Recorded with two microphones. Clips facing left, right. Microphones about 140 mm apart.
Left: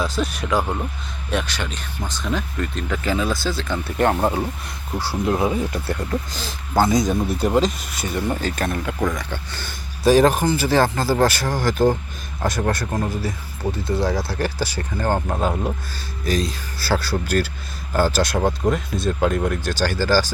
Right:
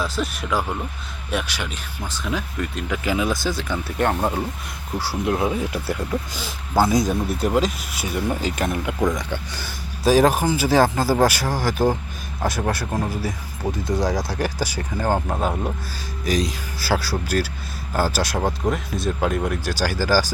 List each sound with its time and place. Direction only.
0.0 s speech: centre (ahead or behind); by 9.6 s 15° right (ahead or behind)
9.6 s speech: 5° right (ahead or behind)
16.2 s speech: 15° right (ahead or behind)